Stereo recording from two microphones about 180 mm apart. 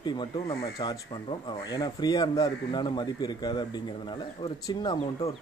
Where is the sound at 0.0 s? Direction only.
25° left (ahead or behind).